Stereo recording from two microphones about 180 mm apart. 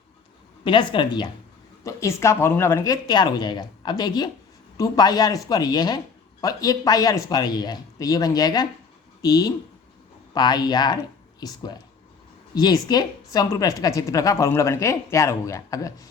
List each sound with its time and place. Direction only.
0.6 s a woman's voice: 25° left (ahead or behind)